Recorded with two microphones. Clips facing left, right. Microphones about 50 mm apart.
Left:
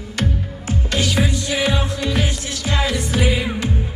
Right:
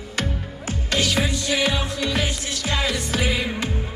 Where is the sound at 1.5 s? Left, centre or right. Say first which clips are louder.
Left 2 dB; left.